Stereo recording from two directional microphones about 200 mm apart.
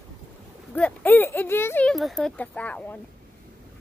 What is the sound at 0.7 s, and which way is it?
A child's voice, 10° left (ahead or behind).